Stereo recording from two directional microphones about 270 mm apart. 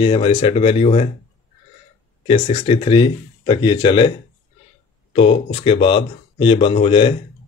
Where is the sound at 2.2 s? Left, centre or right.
Centre.